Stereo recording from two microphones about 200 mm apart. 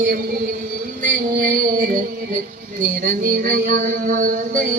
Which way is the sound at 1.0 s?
40° right (ahead or behind).